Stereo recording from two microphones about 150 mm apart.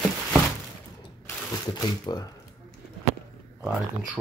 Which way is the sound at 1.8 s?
25° left (ahead or behind).